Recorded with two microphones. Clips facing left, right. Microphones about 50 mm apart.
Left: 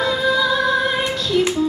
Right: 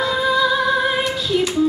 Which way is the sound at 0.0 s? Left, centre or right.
Centre.